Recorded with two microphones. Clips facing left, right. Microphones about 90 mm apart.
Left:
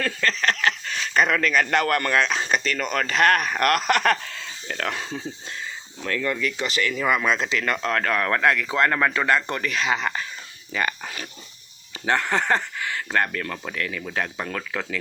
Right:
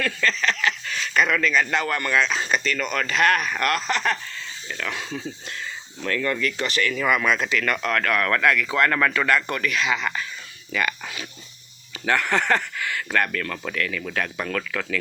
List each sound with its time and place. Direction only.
0.0 s speech: 40° left (ahead or behind); by 4.8 s 75° left (ahead or behind)
4.9 s speech: 30° left (ahead or behind)
6.1 s speech: 20° left (ahead or behind)
6.3 s speech: 5° left (ahead or behind)
6.7 s speech: 20° left (ahead or behind); by 11.3 s 40° left (ahead or behind)
12.0 s speech: 25° left (ahead or behind)